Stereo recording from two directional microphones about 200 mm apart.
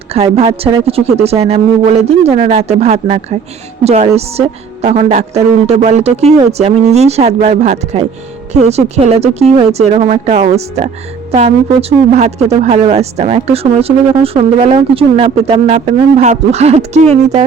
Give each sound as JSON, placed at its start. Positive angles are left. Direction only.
{"t": 0.1, "sound": "a woman's voice", "side_deg": -30}